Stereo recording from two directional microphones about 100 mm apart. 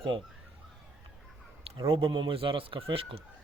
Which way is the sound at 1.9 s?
60° right (ahead or behind).